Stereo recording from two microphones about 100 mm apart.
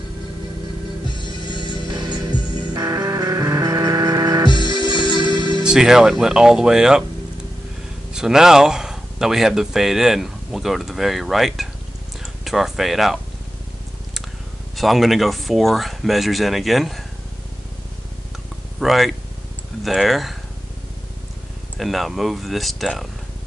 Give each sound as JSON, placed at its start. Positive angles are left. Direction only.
{"t": 1.0, "sound": "music", "side_deg": 50}
{"t": 1.9, "sound": "music", "side_deg": -45}
{"t": 4.5, "sound": "music", "side_deg": 50}
{"t": 5.6, "sound": "speech", "side_deg": -5}
{"t": 8.1, "sound": "speech", "side_deg": -5}
{"t": 14.8, "sound": "speech", "side_deg": 0}
{"t": 18.8, "sound": "speech", "side_deg": 0}
{"t": 21.7, "sound": "speech", "side_deg": 0}